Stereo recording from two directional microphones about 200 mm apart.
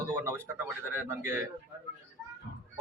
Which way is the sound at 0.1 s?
10° right (ahead or behind).